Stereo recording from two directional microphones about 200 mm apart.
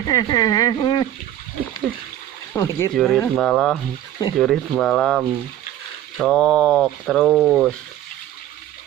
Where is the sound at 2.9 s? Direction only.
5° left (ahead or behind).